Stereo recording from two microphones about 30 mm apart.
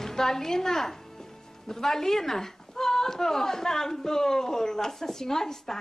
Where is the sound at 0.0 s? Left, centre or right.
Centre.